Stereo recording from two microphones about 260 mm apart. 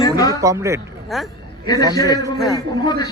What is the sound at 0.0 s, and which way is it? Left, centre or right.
Music, centre.